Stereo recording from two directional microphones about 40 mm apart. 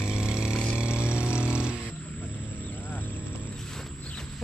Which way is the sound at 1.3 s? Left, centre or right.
Right.